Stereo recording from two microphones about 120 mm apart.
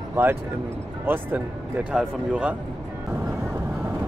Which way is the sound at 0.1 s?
20° right (ahead or behind).